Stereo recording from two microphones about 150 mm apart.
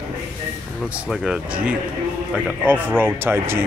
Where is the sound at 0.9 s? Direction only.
5° right (ahead or behind).